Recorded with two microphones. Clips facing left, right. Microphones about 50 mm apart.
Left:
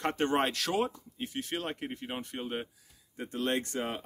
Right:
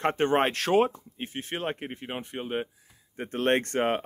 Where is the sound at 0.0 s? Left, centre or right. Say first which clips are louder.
Right 5 dB; right.